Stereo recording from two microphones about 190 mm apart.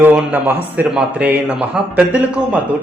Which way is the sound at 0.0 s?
10° right (ahead or behind).